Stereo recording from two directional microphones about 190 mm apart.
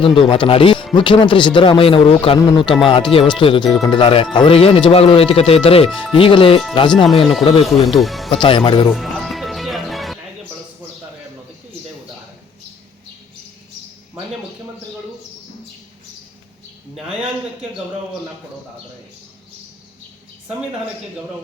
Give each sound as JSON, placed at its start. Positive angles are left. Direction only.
{"t": 0.0, "sound": "speech", "side_deg": 25}
{"t": 7.9, "sound": "speech", "side_deg": 0}
{"t": 8.3, "sound": "speech", "side_deg": 25}
{"t": 8.9, "sound": "music", "side_deg": 0}
{"t": 16.9, "sound": "a sound", "side_deg": -5}